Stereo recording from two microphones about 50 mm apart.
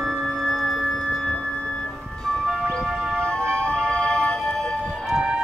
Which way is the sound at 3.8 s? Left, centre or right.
Centre.